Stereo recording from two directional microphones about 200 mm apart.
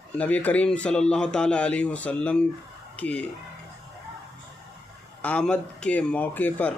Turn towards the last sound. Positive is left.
turn(degrees=10)  # may be behind; listen again after turning